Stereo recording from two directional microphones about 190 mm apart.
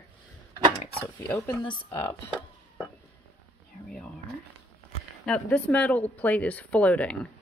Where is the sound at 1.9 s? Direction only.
15° left (ahead or behind).